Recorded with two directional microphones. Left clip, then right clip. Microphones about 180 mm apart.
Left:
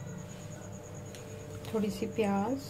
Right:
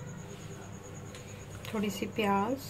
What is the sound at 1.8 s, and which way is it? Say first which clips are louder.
Speech: left 1 dB; 15° left (ahead or behind).